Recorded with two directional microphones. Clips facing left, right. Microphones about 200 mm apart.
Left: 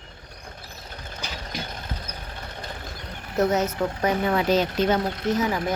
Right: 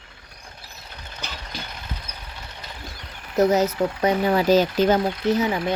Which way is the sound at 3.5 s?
35° right (ahead or behind).